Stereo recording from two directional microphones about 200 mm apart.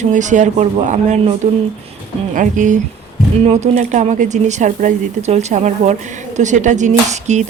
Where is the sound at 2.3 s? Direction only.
40° right (ahead or behind).